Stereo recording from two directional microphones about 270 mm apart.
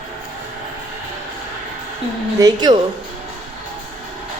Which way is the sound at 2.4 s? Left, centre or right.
Centre.